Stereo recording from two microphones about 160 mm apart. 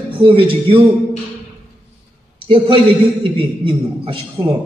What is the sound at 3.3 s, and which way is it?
A man's voice, 30° right (ahead or behind).